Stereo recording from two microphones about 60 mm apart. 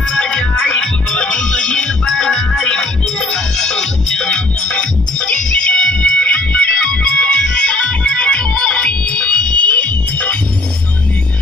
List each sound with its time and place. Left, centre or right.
0.1 s music: centre